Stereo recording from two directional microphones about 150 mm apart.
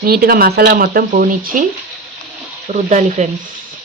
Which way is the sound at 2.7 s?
50° right (ahead or behind).